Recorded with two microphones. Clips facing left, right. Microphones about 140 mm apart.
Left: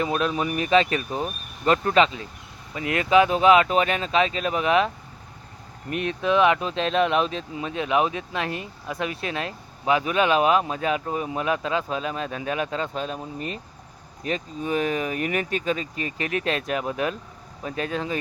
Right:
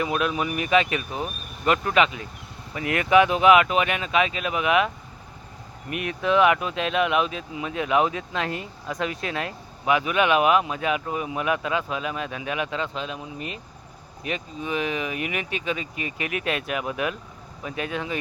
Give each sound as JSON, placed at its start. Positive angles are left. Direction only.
{"t": 0.0, "sound": "speech", "side_deg": 35}
{"t": 5.9, "sound": "speech", "side_deg": 30}